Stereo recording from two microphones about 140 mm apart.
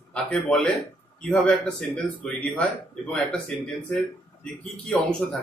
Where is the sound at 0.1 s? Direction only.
5° left (ahead or behind).